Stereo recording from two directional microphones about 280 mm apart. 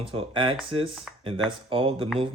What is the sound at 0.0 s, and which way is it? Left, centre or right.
Speech, centre.